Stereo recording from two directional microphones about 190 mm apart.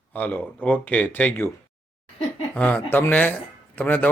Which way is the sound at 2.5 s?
10° left (ahead or behind).